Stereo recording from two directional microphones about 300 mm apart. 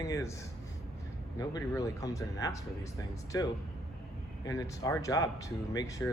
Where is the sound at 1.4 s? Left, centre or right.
Centre.